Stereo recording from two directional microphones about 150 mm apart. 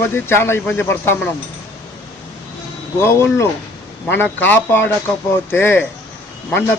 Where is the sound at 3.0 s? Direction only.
15° left (ahead or behind).